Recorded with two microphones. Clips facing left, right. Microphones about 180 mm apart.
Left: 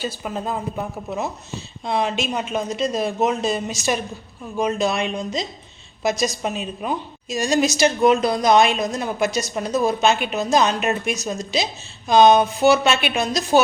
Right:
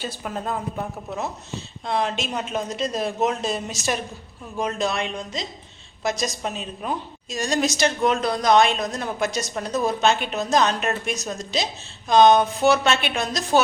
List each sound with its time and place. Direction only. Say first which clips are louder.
0.0 s a woman's voice: left 3 dB; 5° left (ahead or behind)